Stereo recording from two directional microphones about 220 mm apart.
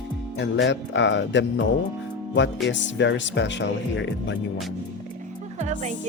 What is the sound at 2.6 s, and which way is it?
Speech, 55° left (ahead or behind).